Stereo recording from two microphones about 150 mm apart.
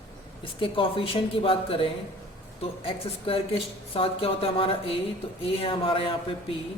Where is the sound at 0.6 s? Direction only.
35° left (ahead or behind).